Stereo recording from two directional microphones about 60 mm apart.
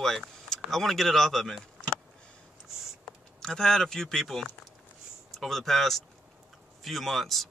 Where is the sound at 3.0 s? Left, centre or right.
Centre.